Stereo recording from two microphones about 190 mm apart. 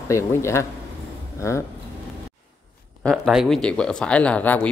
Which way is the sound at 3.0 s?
Centre (ahead or behind).